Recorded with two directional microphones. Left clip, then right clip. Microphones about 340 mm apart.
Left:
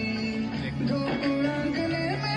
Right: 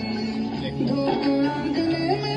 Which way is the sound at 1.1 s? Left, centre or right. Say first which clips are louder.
Right 4 dB; centre.